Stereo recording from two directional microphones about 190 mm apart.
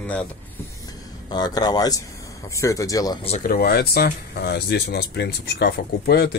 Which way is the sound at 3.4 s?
50° left (ahead or behind).